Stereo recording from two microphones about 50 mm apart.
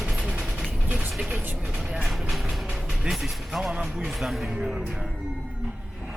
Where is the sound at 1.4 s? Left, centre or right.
Right.